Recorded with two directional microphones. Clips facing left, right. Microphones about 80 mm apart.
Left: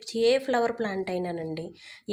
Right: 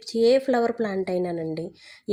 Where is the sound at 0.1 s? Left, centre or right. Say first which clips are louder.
Right 4 dB; centre.